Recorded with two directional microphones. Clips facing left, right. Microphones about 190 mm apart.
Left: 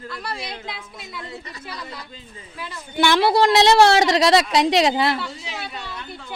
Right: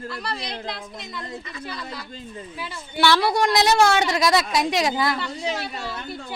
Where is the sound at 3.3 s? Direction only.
30° left (ahead or behind).